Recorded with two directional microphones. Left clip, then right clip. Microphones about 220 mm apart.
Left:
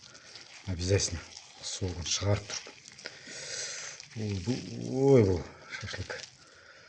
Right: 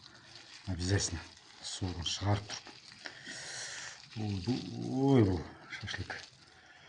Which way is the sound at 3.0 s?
40° left (ahead or behind).